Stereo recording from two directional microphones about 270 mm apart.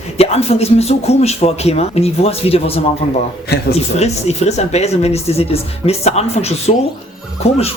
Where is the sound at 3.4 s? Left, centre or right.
Left.